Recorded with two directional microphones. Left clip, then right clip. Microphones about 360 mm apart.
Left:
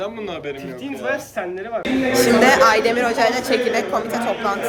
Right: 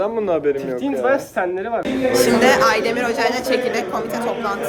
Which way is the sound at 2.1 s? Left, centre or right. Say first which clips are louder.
Left 1 dB; centre.